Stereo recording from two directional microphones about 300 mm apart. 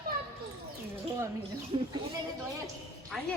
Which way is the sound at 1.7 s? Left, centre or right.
Centre.